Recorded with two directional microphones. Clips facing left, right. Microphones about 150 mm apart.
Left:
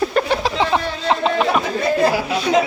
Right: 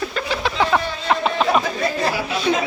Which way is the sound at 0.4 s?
25° left (ahead or behind).